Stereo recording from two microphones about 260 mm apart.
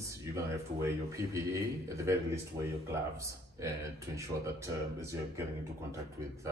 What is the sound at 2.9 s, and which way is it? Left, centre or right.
Speech, centre.